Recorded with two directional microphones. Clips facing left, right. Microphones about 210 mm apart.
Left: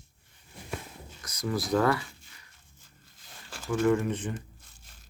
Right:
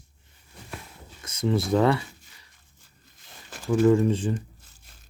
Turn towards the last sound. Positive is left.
turn(degrees=-30)  # may be behind; listen again after turning